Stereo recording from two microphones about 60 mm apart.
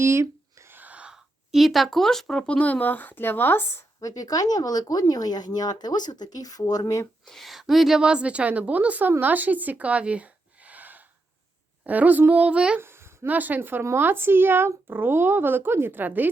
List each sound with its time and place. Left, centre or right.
0.0 s a sound: right
0.8 s sneeze: right
1.1 s speech: centre
2.5 s speech: left
4.0 s speech: left
7.3 s speech: centre
8.0 s a woman's voice: centre
12.8 s a sound: right
13.2 s a woman's voice: right